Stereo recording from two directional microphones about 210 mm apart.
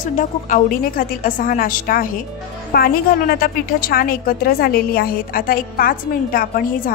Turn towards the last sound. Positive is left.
turn(degrees=45)  # may be behind; listen again after turning